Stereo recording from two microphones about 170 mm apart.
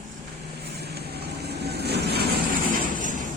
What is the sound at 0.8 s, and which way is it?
Vehicle, 70° right (ahead or behind).